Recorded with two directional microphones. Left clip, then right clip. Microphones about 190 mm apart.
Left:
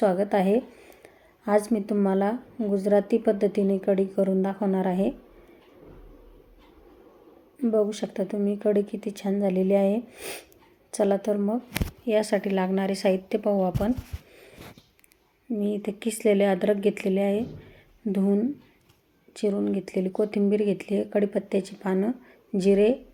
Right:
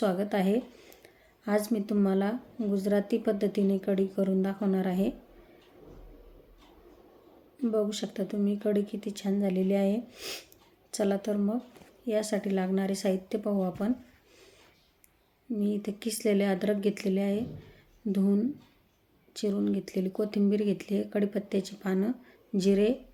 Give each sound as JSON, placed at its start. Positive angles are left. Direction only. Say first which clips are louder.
{"t": 0.0, "sound": "speech", "louder": "left 6 dB", "side_deg": -5}
{"t": 7.6, "sound": "speech", "louder": "left 5 dB", "side_deg": -5}
{"t": 15.5, "sound": "speech", "louder": "left 4 dB", "side_deg": -10}